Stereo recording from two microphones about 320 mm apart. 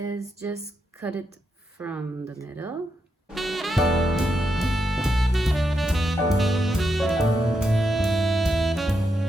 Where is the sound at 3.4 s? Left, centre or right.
Centre.